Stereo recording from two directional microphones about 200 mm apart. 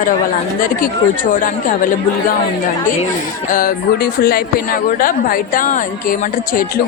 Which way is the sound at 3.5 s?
45° left (ahead or behind).